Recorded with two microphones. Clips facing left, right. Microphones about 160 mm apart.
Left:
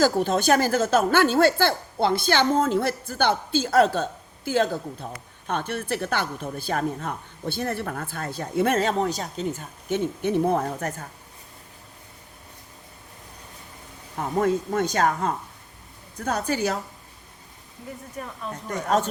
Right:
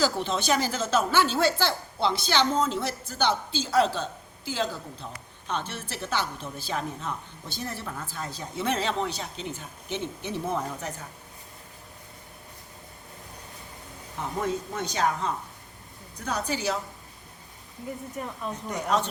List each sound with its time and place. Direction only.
0.0 s a woman's voice: 50° left (ahead or behind)
14.3 s a woman's voice: 50° left (ahead or behind)